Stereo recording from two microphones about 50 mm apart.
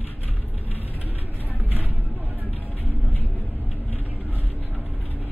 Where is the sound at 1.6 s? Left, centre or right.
Right.